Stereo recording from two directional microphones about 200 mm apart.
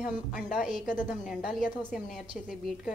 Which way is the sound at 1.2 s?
Centre (ahead or behind).